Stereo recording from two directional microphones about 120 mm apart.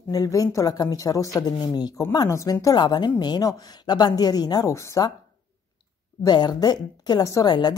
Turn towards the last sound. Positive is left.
turn(degrees=35)  # may be behind; listen again after turning